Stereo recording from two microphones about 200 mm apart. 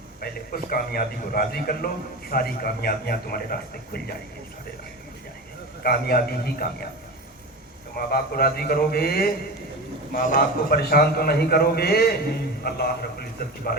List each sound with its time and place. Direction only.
0.2 s a man's voice: 50° left (ahead or behind)
5.8 s a man's voice: 50° left (ahead or behind)
7.9 s a man's voice: 50° left (ahead or behind)